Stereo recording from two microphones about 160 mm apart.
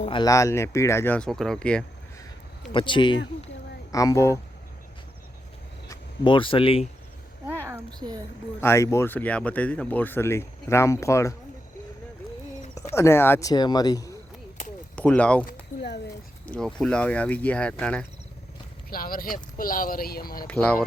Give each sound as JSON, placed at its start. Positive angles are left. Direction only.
{"t": 0.0, "sound": "speech", "side_deg": 30}
{"t": 2.7, "sound": "speech", "side_deg": 30}
{"t": 6.2, "sound": "speech", "side_deg": 30}
{"t": 7.4, "sound": "a sound", "side_deg": -15}
{"t": 7.9, "sound": "speech", "side_deg": -25}
{"t": 8.6, "sound": "speech", "side_deg": 15}
{"t": 12.9, "sound": "speech", "side_deg": 15}
{"t": 14.9, "sound": "speech", "side_deg": 10}
{"t": 16.5, "sound": "speech", "side_deg": 5}
{"t": 18.9, "sound": "speech", "side_deg": 65}
{"t": 20.5, "sound": "speech", "side_deg": 10}